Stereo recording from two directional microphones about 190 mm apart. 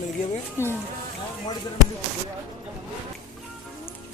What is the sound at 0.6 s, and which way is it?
Speech, 15° left (ahead or behind).